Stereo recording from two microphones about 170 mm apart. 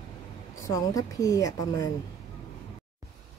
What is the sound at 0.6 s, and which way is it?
A woman's voice, 20° left (ahead or behind).